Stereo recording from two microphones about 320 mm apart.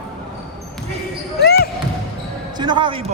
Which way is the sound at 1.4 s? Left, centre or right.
Left.